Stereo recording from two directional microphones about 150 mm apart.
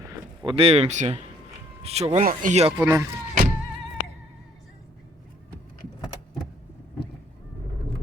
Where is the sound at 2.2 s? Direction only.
60° right (ahead or behind).